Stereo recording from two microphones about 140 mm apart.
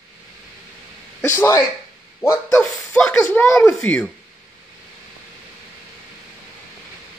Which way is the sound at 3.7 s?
15° left (ahead or behind).